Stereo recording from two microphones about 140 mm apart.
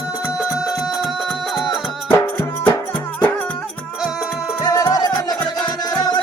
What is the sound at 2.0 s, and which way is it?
Music, 15° left (ahead or behind).